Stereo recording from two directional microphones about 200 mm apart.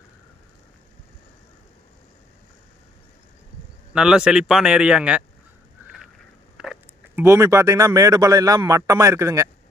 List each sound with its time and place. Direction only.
3.9 s speech: 5° right (ahead or behind)
5.8 s a sound: 10° right (ahead or behind)
7.2 s speech: 15° right (ahead or behind)